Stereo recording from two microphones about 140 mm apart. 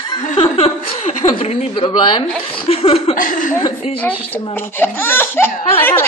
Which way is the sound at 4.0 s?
10° left (ahead or behind).